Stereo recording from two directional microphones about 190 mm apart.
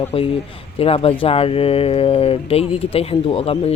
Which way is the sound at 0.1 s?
30° left (ahead or behind).